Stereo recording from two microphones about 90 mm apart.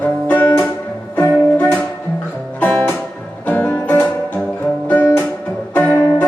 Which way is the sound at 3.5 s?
15° left (ahead or behind).